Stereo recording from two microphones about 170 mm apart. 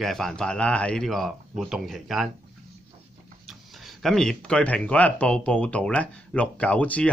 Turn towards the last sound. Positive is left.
turn(degrees=10)  # may be behind; listen again after turning